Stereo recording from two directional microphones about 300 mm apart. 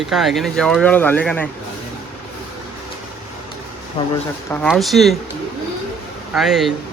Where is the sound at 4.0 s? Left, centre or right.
Centre.